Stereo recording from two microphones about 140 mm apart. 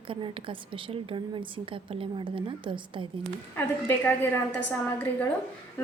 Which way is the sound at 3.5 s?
15° left (ahead or behind).